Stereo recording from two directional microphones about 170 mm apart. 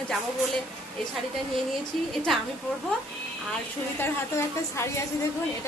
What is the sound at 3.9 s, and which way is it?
Speech, 15° left (ahead or behind).